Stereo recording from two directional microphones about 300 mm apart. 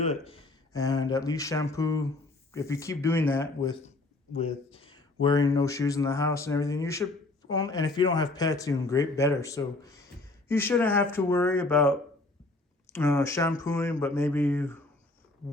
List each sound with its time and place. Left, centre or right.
0.0 s speech: left
0.7 s speech: centre